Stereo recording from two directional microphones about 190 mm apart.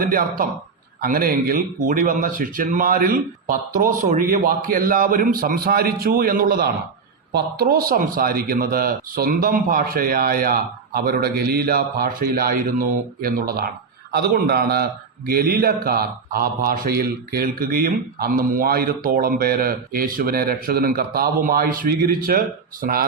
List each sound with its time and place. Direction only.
0.0 s a man's voice: 50° right (ahead or behind)